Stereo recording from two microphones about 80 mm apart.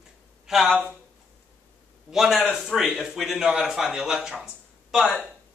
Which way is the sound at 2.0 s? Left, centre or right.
Centre.